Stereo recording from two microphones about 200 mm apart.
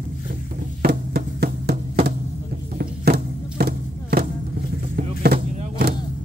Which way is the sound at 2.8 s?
50° right (ahead or behind).